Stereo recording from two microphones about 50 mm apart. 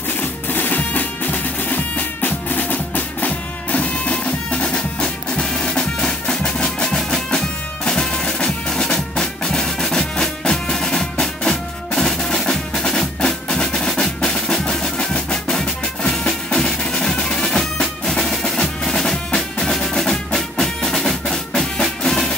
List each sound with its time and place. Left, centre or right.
0.2 s music: left; by 22.3 s centre